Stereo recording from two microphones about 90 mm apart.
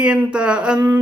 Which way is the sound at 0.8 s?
25° right (ahead or behind).